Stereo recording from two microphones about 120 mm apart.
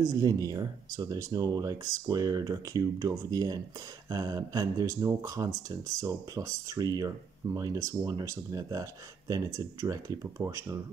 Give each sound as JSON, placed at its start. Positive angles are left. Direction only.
{"t": 0.0, "sound": "speech", "side_deg": -30}